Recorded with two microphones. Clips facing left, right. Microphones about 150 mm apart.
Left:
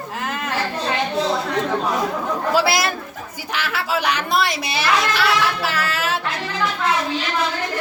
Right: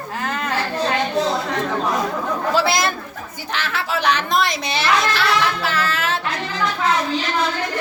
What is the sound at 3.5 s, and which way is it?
Speech, 10° left (ahead or behind).